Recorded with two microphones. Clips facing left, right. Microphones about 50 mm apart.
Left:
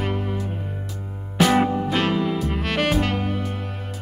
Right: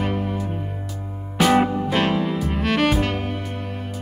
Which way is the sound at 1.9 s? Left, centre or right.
Centre.